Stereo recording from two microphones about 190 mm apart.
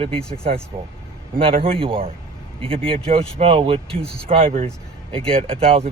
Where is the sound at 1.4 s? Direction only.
30° right (ahead or behind).